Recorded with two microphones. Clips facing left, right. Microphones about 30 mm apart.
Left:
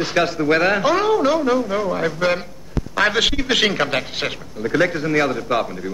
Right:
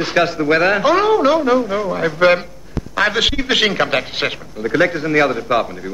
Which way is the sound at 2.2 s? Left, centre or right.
Right.